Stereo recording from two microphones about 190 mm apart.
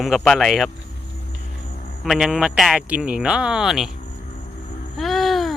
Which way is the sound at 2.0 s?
Centre (ahead or behind).